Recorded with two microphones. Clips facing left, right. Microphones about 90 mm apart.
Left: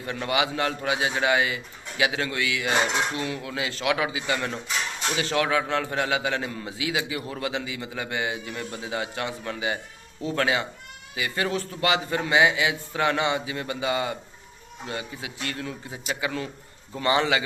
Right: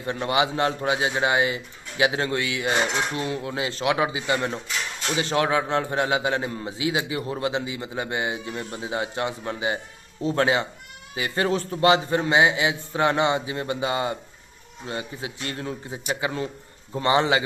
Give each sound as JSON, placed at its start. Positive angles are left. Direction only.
{"t": 0.0, "sound": "a man's voice", "side_deg": -25}